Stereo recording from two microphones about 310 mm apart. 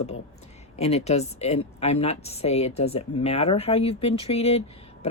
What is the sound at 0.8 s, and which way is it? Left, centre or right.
A woman's voice, centre.